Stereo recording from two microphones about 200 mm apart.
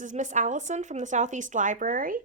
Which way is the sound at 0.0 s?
40° right (ahead or behind).